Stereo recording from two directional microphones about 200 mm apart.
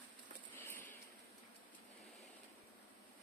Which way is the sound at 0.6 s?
10° left (ahead or behind).